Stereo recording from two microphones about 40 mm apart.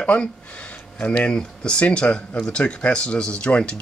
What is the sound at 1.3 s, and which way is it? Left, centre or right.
Speech, left.